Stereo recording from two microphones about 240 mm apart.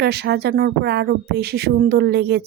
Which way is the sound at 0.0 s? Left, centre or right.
Right.